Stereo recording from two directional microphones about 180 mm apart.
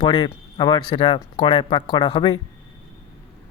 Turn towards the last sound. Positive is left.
turn(degrees=25)  # may be behind; listen again after turning